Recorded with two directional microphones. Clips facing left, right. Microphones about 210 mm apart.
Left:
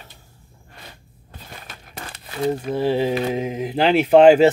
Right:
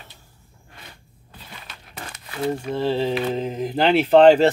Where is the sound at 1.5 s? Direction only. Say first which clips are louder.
Left 2 dB; 45° left (ahead or behind).